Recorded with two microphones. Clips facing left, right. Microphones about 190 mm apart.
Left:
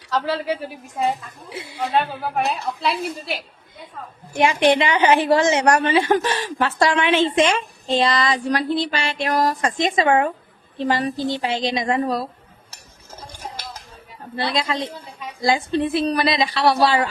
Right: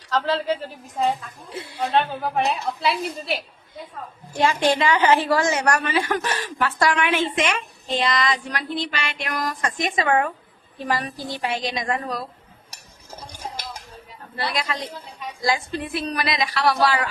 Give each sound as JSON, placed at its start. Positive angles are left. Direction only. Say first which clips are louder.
{"t": 0.1, "sound": "a woman's voice", "louder": "even", "side_deg": 10}
{"t": 4.6, "sound": "a woman's voice", "louder": "left 3 dB", "side_deg": 20}
{"t": 13.3, "sound": "dishes", "louder": "even", "side_deg": -10}
{"t": 14.3, "sound": "a woman's voice", "louder": "left 4 dB", "side_deg": 25}